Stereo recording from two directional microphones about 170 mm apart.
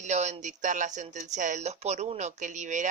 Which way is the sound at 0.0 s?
45° right (ahead or behind).